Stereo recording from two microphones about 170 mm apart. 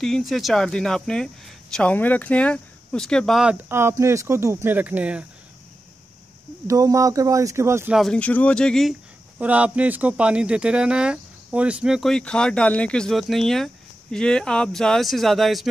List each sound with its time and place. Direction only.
0.0 s speech: centre (ahead or behind)
6.7 s speech: 20° right (ahead or behind)
7.9 s speech: 5° left (ahead or behind)
9.4 s speech: 10° right (ahead or behind)